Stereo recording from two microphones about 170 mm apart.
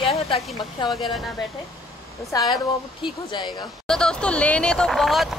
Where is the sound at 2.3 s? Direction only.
25° left (ahead or behind).